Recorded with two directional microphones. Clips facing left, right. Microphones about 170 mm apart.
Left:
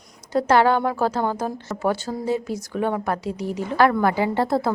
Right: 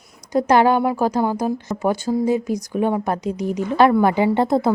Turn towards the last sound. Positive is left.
turn(degrees=-20)  # may be behind; listen again after turning